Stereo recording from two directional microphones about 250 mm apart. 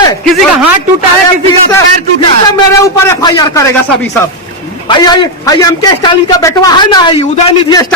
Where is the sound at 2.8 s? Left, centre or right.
Centre.